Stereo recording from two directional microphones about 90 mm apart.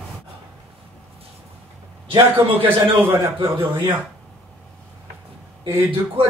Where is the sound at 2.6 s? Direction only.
70° right (ahead or behind).